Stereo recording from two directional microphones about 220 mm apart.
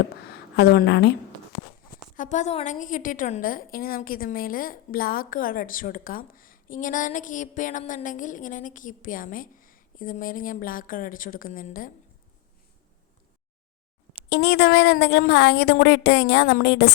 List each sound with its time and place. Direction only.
0.5 s speech: 45° left (ahead or behind)
2.1 s a woman's voice: 35° left (ahead or behind)
14.3 s speech: 50° left (ahead or behind)